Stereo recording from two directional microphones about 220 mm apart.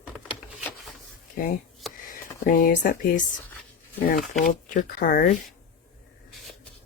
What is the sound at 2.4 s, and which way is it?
Speech, 40° left (ahead or behind).